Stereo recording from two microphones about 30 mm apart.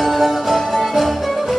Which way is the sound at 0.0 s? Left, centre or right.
Centre.